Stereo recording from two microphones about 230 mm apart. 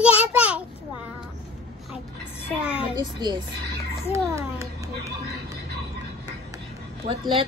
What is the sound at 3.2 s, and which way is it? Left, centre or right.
A woman's voice, centre.